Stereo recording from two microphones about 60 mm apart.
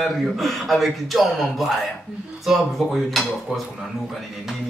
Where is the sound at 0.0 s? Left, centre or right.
Centre.